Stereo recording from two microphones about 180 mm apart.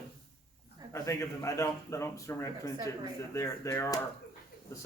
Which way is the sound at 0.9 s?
15° left (ahead or behind).